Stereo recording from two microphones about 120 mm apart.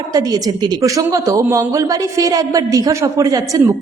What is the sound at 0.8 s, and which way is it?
A man's voice, 25° right (ahead or behind).